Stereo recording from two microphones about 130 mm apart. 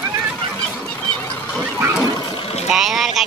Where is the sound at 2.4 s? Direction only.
55° left (ahead or behind).